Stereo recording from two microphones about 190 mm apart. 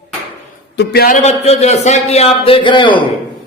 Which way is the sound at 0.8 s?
50° left (ahead or behind).